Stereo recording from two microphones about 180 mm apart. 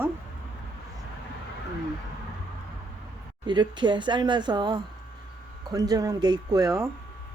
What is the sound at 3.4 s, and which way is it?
Speech, 25° right (ahead or behind).